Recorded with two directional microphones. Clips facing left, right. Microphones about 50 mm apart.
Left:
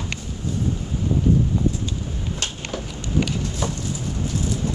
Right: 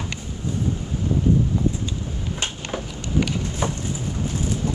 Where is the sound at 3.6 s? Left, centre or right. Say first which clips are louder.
Right 2 dB; right.